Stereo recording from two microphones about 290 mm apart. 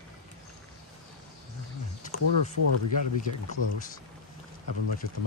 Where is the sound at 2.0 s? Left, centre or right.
Left.